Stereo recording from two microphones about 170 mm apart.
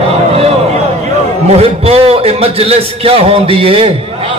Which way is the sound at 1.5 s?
35° right (ahead or behind).